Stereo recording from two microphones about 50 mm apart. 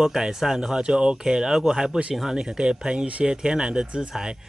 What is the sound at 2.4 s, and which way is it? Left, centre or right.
Speech, centre.